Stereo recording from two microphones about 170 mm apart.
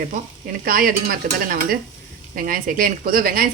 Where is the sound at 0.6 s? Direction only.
55° right (ahead or behind).